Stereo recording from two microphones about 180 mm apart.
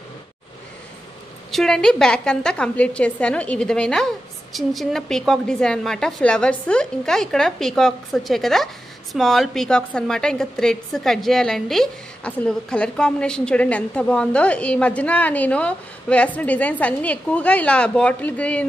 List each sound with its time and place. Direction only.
1.5 s a woman's voice: 5° left (ahead or behind)